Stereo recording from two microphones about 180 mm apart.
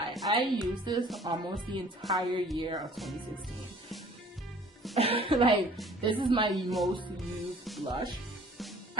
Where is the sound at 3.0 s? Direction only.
Centre (ahead or behind).